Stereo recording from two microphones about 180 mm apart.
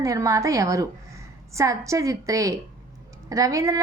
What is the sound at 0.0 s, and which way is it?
A woman's voice, 20° right (ahead or behind).